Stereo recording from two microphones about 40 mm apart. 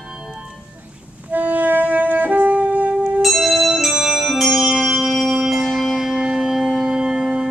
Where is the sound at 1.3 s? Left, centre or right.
Right.